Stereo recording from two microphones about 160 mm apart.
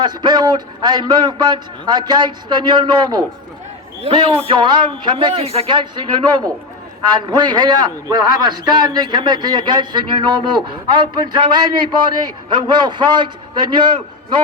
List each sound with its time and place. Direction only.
0.0 s a man's voice: 25° right (ahead or behind)
4.0 s a man's voice: 35° right (ahead or behind)